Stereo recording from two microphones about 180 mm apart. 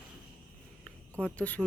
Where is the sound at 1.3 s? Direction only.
10° left (ahead or behind).